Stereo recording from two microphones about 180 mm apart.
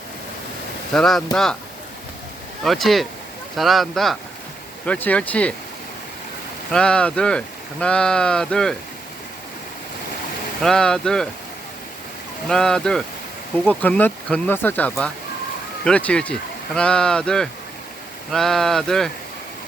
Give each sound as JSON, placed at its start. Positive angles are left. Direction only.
{"t": 0.9, "sound": "speech", "side_deg": 0}
{"t": 2.6, "sound": "speech", "side_deg": 0}
{"t": 6.7, "sound": "speech", "side_deg": 5}
{"t": 10.6, "sound": "speech", "side_deg": 5}
{"t": 12.5, "sound": "speech", "side_deg": 5}